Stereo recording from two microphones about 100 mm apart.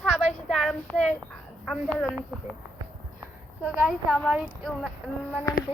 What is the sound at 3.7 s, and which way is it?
A woman's voice, 5° right (ahead or behind).